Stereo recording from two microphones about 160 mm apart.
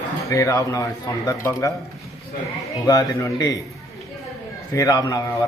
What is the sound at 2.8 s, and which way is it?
Speech, 20° left (ahead or behind).